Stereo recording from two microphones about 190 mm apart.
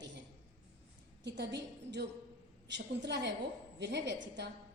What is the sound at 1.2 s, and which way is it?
A woman's voice, 65° right (ahead or behind).